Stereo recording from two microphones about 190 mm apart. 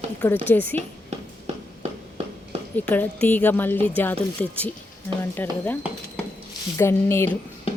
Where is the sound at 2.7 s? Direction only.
10° left (ahead or behind).